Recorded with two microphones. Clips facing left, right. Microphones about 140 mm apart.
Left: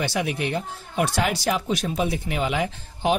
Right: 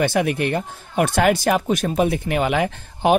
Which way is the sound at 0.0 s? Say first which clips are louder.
Right 6 dB; 55° right (ahead or behind).